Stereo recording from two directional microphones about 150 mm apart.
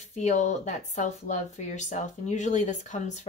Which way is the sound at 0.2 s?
50° left (ahead or behind).